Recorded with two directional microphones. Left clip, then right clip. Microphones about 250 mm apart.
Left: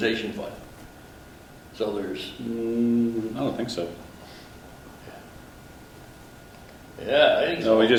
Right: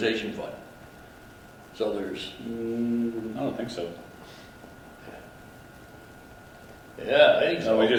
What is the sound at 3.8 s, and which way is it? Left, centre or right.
Speech, centre.